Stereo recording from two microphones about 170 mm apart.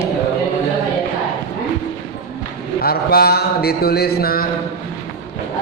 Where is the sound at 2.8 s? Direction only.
65° left (ahead or behind).